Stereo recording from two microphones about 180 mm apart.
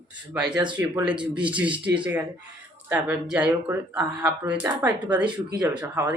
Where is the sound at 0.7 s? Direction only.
5° right (ahead or behind).